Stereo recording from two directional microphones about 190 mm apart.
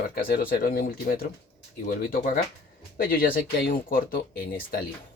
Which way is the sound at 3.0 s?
50° left (ahead or behind).